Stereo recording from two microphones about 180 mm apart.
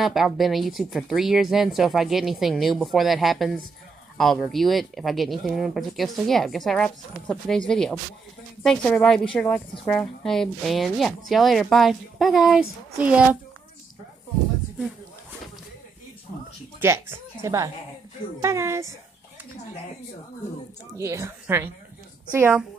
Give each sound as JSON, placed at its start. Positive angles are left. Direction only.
{"t": 0.0, "sound": "speech", "side_deg": 0}
{"t": 16.8, "sound": "a woman's voice", "side_deg": -15}
{"t": 21.0, "sound": "a woman's voice", "side_deg": -15}